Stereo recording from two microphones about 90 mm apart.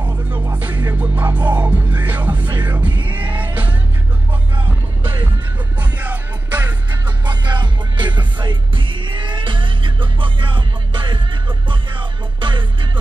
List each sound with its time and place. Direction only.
0.0 s music: 20° right (ahead or behind)
5.8 s music: 20° right (ahead or behind)
7.2 s music: 55° right (ahead or behind)